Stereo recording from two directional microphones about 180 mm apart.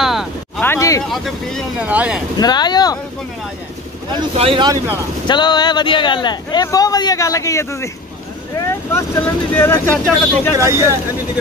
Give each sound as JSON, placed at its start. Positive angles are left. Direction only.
{"t": 0.0, "sound": "a sound", "side_deg": 0}
{"t": 0.6, "sound": "a sound", "side_deg": 15}
{"t": 1.0, "sound": "speech", "side_deg": 0}
{"t": 2.3, "sound": "speech", "side_deg": 25}
{"t": 4.1, "sound": "speech", "side_deg": -30}
{"t": 5.2, "sound": "speech", "side_deg": 25}
{"t": 8.9, "sound": "speech", "side_deg": 15}
{"t": 10.6, "sound": "speech", "side_deg": -15}